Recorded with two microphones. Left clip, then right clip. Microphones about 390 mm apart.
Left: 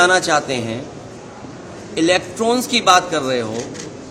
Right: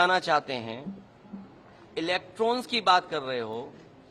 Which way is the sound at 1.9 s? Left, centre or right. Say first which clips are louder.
Left 13 dB; right.